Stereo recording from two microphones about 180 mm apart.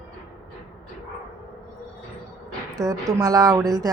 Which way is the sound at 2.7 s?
20° right (ahead or behind).